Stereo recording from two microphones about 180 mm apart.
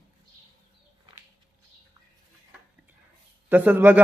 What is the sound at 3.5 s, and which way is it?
Speech, 10° right (ahead or behind).